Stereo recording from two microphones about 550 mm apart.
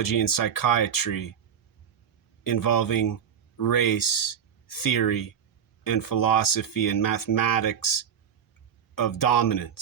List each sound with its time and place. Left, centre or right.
0.0 s speech: left
2.4 s speech: left